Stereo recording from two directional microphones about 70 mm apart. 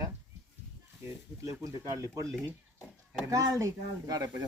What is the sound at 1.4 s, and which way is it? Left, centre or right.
Speech, right.